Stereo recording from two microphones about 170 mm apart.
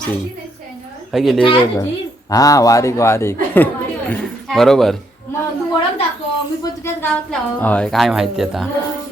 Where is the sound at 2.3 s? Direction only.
20° left (ahead or behind).